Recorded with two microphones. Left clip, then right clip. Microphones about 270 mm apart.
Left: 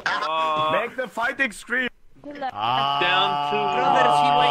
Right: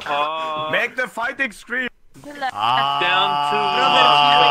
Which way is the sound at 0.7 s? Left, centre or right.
Right.